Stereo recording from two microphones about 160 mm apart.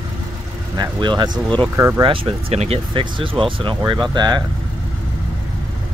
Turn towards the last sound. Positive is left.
turn(degrees=-25)  # may be behind; listen again after turning